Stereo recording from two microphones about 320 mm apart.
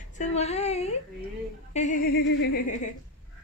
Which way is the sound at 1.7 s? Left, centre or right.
Left.